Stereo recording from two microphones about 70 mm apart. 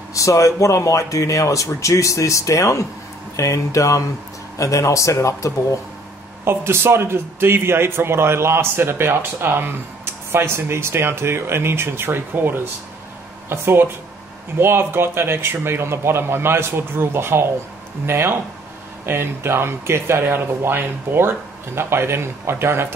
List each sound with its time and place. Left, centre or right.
0.1 s speech: left
6.4 s speech: right